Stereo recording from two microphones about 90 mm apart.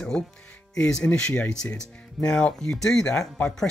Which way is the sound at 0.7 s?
10° left (ahead or behind).